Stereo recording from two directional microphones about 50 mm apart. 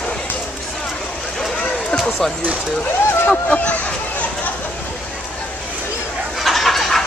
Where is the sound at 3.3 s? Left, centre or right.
Left.